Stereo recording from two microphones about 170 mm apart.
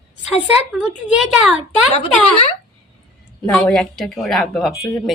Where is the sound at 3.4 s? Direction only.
5° left (ahead or behind).